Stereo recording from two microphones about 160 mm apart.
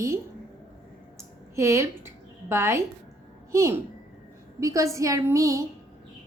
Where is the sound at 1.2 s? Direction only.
15° right (ahead or behind).